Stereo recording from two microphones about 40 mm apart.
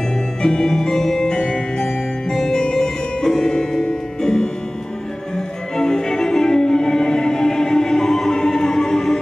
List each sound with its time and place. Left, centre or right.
0.4 s music: centre
5.8 s music: centre